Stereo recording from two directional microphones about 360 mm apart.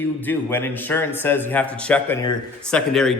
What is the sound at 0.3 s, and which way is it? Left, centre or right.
Speech, centre.